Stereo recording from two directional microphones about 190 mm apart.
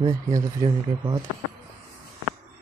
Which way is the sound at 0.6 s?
15° right (ahead or behind).